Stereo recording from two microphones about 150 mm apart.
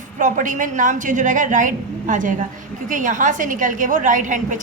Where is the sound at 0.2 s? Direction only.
55° right (ahead or behind).